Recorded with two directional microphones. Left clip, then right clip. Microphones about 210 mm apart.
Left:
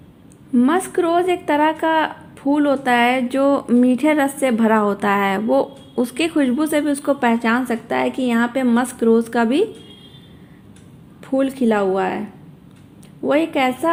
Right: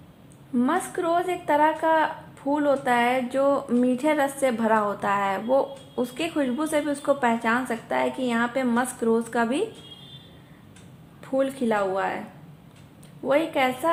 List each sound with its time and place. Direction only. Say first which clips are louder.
0.5 s a woman's voice: left 7 dB; 40° left (ahead or behind)
11.2 s a woman's voice: left 5 dB; 40° left (ahead or behind)
13.2 s a woman's voice: left 5 dB; 40° left (ahead or behind)